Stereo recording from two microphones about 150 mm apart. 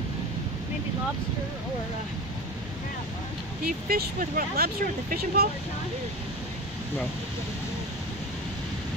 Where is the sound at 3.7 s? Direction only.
80° right.